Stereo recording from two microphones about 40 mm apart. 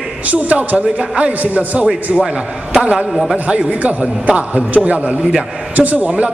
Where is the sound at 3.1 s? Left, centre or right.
Centre.